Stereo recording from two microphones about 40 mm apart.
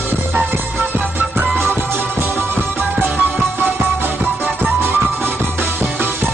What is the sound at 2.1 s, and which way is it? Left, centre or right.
Music, right.